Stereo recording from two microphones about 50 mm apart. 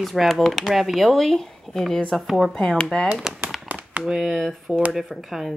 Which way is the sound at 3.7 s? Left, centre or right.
Right.